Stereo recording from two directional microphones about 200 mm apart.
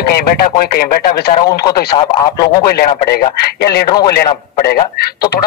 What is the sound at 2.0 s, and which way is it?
Speech, 20° left (ahead or behind).